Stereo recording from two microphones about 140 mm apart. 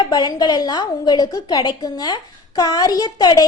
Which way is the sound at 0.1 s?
30° left (ahead or behind).